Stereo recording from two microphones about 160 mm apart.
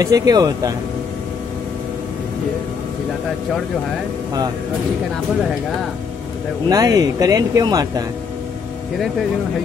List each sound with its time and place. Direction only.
0.0 s speech: 20° right (ahead or behind)
6.7 s speech: 20° right (ahead or behind)